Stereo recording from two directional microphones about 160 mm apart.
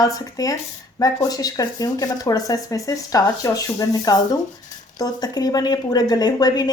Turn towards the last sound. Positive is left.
turn(degrees=25)  # may be behind; listen again after turning